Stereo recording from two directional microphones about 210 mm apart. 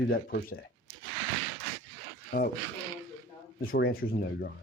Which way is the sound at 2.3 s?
45° left (ahead or behind).